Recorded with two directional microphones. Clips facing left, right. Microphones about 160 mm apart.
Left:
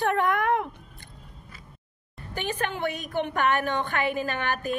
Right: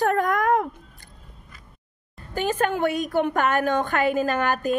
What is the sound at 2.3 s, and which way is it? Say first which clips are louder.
A woman's voice: right 7 dB; 40° right (ahead or behind).